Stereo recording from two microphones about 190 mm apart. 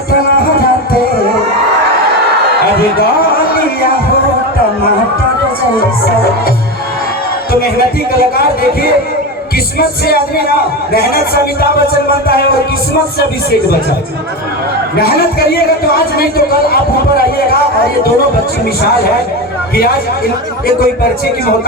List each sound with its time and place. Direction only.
7.5 s speech: 50° left (ahead or behind)
9.7 s speech: 55° left (ahead or behind)
14.9 s speech: 55° left (ahead or behind)
19.7 s speech: 50° left (ahead or behind)